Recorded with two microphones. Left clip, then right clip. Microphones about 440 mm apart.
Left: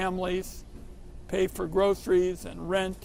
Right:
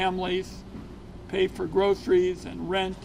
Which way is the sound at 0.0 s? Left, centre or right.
Left.